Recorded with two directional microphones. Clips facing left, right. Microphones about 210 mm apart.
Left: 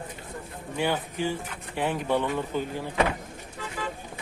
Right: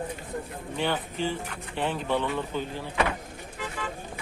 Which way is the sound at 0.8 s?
10° left (ahead or behind).